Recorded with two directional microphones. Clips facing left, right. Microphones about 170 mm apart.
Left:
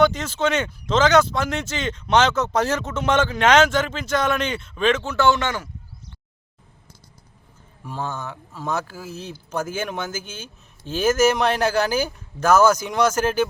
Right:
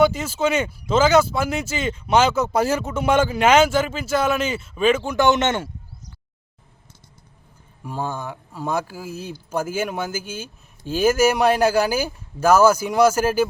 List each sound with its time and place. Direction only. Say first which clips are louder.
0.0 s speech: right 1 dB; 10° right (ahead or behind)
7.9 s speech: right 2 dB; 10° right (ahead or behind)